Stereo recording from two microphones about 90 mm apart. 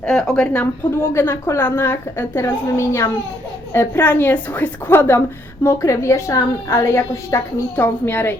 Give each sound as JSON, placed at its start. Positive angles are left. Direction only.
{"t": 0.0, "sound": "a woman's voice", "side_deg": 5}
{"t": 0.4, "sound": "a woman's voice", "side_deg": 20}
{"t": 7.8, "sound": "a woman's voice", "side_deg": 25}